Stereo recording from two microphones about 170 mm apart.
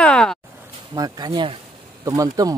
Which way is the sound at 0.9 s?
25° right (ahead or behind).